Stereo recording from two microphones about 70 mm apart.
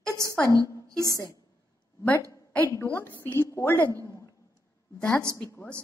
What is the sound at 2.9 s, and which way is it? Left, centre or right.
A woman's voice, left.